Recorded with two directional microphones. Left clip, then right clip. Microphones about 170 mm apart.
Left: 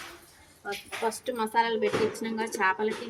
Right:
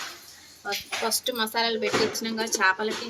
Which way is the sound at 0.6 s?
5° left (ahead or behind).